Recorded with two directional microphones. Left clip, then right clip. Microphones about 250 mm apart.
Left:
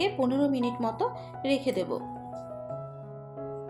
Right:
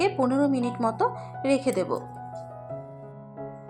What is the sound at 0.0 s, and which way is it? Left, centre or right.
A woman's voice, centre.